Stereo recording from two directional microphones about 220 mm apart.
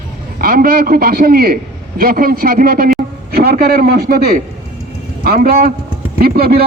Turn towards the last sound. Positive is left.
turn(degrees=-45)  # may be behind; listen again after turning